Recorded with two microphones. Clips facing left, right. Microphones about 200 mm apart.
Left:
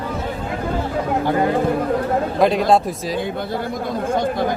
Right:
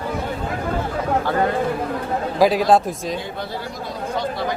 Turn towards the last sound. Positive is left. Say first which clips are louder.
# left 4 dB
turn(degrees=50)  # may be behind; listen again after turning